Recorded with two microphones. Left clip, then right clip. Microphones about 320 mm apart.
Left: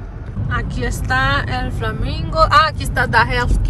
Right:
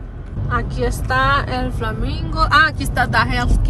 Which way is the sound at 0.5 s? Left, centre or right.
Centre.